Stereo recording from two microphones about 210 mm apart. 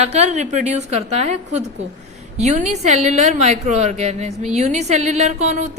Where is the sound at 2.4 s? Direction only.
35° right (ahead or behind).